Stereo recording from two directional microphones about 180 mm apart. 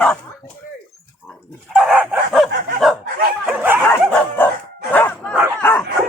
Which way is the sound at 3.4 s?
10° right (ahead or behind).